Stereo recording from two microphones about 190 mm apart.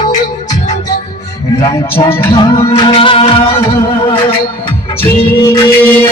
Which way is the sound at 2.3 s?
25° left (ahead or behind).